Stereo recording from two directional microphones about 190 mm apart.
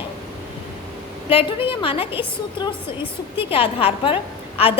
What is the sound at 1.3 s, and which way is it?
A woman's voice, 30° left (ahead or behind).